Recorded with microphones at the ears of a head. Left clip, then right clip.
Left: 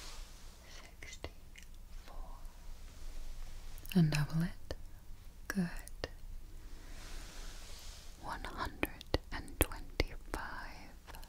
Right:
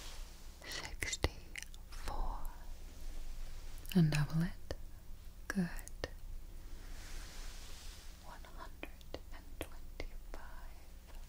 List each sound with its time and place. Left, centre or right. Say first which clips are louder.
0.6 s whispering: right 12 dB; right
3.9 s speech: left 1 dB; centre
5.5 s whispering: left 1 dB; centre
8.2 s whispering: left 13 dB; left